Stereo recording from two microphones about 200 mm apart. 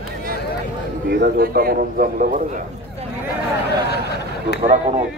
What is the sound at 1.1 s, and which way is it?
Speech, 50° right (ahead or behind).